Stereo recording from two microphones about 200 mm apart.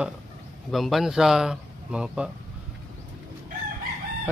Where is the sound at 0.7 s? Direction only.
Centre (ahead or behind).